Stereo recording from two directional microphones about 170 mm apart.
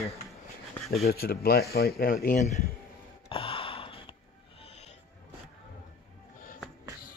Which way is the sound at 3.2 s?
30° left (ahead or behind).